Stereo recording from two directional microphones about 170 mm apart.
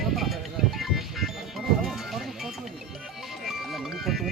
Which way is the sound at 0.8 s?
Centre (ahead or behind).